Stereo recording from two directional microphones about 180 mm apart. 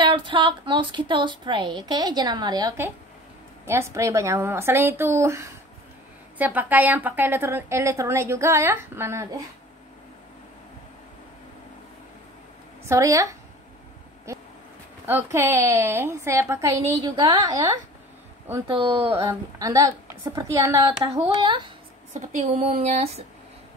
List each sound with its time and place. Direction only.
0.0 s a woman's voice: 25° right (ahead or behind)
12.8 s a woman's voice: 15° right (ahead or behind)
14.3 s a sound: 15° right (ahead or behind)
15.0 s a woman's voice: 15° right (ahead or behind); by 19.2 s 30° right (ahead or behind)
19.2 s a woman's voice: 20° right (ahead or behind)
22.1 s speech: 40° right (ahead or behind)